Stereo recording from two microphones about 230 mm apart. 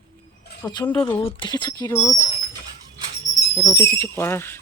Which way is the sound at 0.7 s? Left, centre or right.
Centre.